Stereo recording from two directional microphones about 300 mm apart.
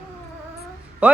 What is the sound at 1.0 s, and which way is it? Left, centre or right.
Speech, centre.